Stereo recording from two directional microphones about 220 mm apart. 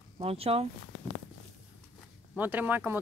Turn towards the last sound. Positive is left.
turn(degrees=-10)  # may be behind; listen again after turning